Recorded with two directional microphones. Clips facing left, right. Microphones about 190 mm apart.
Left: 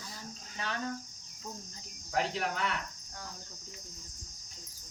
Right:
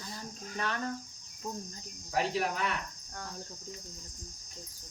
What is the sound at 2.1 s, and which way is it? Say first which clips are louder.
Cricket: right 2 dB; 10° right (ahead or behind).